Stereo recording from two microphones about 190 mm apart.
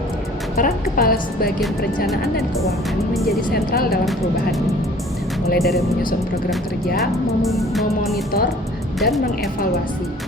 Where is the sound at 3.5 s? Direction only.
55° left (ahead or behind).